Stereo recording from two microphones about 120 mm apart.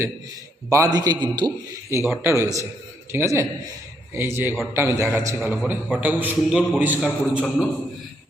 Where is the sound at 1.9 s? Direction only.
20° right (ahead or behind).